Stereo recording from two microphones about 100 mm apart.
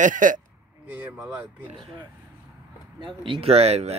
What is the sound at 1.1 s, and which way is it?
Speech, 15° right (ahead or behind).